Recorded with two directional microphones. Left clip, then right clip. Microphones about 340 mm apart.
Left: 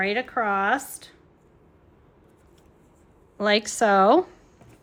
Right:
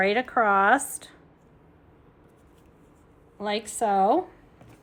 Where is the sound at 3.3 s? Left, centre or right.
Centre.